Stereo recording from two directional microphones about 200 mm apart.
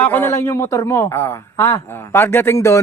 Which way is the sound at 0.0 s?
10° left (ahead or behind).